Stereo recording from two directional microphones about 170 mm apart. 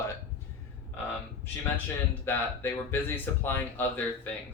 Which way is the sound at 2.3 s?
10° left (ahead or behind).